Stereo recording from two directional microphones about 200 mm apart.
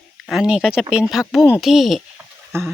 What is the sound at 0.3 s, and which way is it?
Speech, 5° right (ahead or behind).